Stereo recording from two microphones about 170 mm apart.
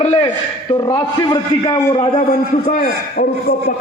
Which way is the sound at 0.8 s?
25° left (ahead or behind).